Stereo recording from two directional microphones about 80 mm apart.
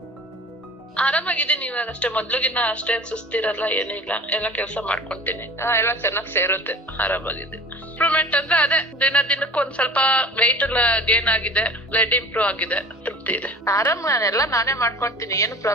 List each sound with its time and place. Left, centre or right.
0.9 s a woman's voice: centre
13.7 s a woman's voice: left